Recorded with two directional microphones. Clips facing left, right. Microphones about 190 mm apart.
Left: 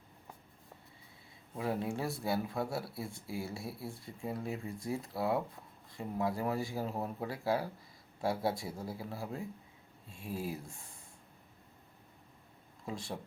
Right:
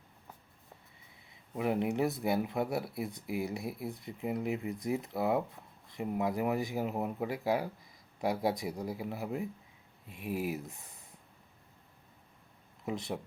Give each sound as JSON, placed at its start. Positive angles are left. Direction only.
{"t": 1.5, "sound": "speech", "side_deg": -20}
{"t": 12.8, "sound": "speech", "side_deg": -20}